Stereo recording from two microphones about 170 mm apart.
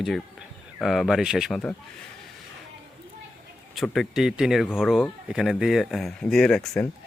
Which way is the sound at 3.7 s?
Centre (ahead or behind).